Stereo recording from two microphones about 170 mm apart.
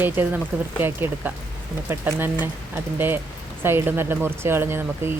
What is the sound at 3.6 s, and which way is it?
Speech, 15° right (ahead or behind).